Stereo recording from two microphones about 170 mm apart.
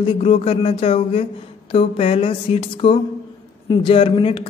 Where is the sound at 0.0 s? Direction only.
35° left (ahead or behind).